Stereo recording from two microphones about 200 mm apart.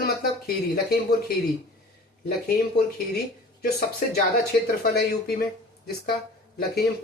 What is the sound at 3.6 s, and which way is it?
Speech, 50° left (ahead or behind).